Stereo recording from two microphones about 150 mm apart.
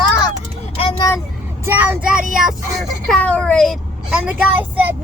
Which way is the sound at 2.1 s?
65° right (ahead or behind).